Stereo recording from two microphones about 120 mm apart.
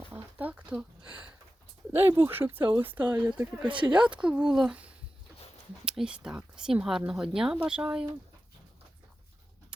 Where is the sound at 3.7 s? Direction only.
40° right (ahead or behind).